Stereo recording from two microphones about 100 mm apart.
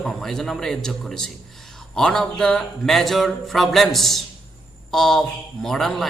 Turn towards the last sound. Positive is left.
turn(degrees=5)  # may be behind; listen again after turning